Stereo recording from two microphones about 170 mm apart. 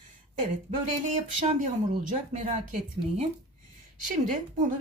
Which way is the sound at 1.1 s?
45° right (ahead or behind).